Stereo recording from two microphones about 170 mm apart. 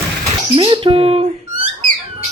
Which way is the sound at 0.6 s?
30° right (ahead or behind).